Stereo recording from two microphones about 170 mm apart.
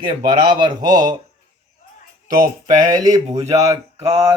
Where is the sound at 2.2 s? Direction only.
55° right (ahead or behind).